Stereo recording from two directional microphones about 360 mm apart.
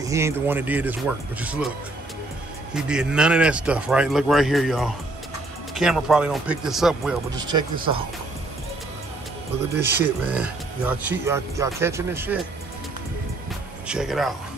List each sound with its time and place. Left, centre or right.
0.0 s speech: centre
2.7 s speech: centre
7.3 s speech: centre
9.9 s speech: centre
13.8 s speech: centre